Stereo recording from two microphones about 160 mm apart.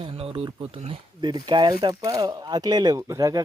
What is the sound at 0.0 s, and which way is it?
Speech, 35° right (ahead or behind).